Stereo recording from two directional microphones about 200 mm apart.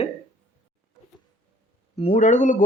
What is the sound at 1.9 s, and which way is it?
Speech, 35° left (ahead or behind).